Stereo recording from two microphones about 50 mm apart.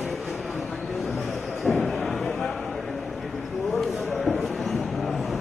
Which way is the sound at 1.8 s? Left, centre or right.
Centre.